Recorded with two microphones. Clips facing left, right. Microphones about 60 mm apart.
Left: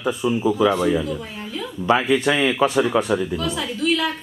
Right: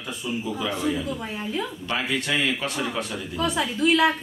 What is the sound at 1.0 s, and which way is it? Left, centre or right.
Speech, centre.